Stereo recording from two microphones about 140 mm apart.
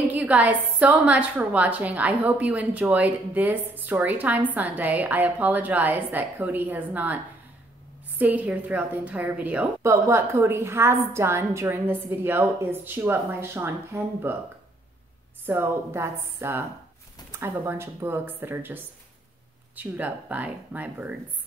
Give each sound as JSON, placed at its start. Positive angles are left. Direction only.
{"t": 0.1, "sound": "a woman's voice", "side_deg": -10}
{"t": 8.2, "sound": "a woman's voice", "side_deg": -10}
{"t": 15.4, "sound": "a woman's voice", "side_deg": -15}